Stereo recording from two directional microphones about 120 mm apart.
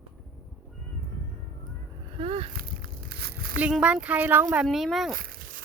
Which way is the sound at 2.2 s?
55° right (ahead or behind).